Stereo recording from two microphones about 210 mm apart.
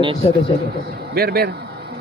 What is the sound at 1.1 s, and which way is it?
Speech, 50° right (ahead or behind).